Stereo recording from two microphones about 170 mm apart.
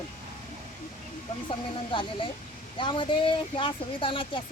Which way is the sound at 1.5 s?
30° left (ahead or behind).